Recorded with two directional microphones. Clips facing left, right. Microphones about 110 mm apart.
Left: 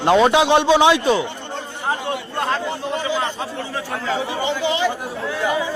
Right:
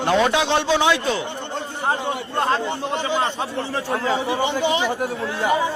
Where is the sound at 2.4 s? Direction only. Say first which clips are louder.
Right 2 dB; 25° right (ahead or behind).